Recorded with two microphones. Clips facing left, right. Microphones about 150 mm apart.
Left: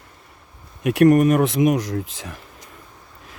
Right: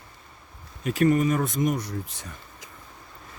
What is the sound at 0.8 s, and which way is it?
Speech, 70° left (ahead or behind).